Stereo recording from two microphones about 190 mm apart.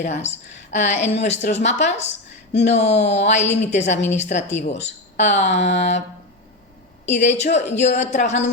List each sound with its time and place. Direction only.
0.0 s a woman's voice: 35° left (ahead or behind)
7.1 s a woman's voice: 35° left (ahead or behind)